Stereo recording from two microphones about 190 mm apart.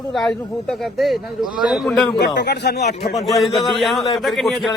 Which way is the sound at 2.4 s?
60° left (ahead or behind).